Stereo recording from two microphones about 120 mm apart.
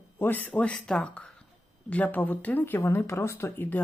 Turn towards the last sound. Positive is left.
turn(degrees=15)  # may be behind; listen again after turning